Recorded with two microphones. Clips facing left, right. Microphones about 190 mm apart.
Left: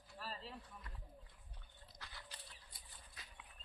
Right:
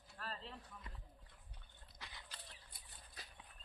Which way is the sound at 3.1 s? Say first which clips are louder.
Right 3 dB; 35° right (ahead or behind).